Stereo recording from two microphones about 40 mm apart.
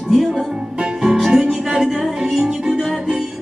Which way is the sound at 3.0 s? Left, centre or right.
Centre.